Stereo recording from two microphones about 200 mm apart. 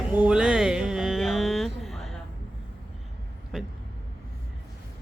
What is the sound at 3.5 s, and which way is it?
Speech, centre (ahead or behind).